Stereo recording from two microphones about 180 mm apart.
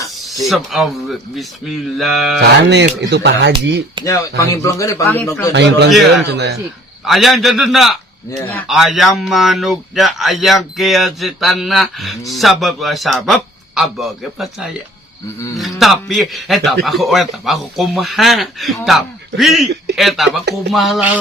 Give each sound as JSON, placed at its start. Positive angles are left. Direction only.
{"t": 0.4, "sound": "speech", "side_deg": 0}
{"t": 2.4, "sound": "speech", "side_deg": -70}
{"t": 4.0, "sound": "speech", "side_deg": 15}
{"t": 5.5, "sound": "speech", "side_deg": -75}
{"t": 5.9, "sound": "speech", "side_deg": 0}
{"t": 6.3, "sound": "speech", "side_deg": -65}
{"t": 7.0, "sound": "speech", "side_deg": 0}
{"t": 15.5, "sound": "speech", "side_deg": 0}